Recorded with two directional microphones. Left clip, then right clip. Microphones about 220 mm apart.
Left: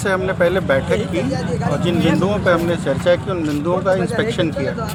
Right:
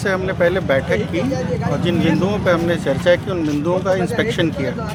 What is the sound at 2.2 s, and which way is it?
Speech, centre (ahead or behind).